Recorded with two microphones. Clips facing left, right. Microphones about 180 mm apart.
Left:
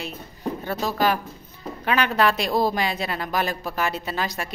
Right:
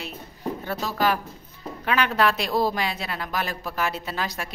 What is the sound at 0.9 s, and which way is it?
A woman's voice, centre (ahead or behind).